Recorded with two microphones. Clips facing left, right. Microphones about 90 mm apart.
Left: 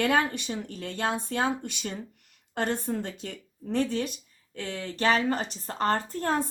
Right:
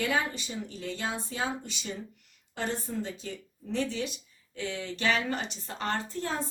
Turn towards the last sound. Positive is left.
turn(degrees=50)  # may be behind; listen again after turning